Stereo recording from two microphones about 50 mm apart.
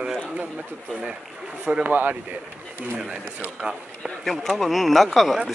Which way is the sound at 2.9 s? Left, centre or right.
Right.